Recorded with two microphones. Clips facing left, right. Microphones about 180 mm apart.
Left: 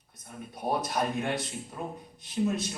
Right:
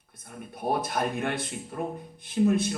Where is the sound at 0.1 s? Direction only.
55° right (ahead or behind).